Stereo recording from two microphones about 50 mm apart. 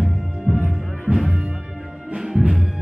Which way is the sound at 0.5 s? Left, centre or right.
Centre.